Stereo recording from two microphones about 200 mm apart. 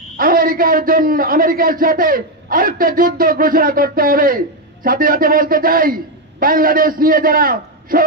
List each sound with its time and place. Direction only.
0.2 s a man's voice: 45° right (ahead or behind)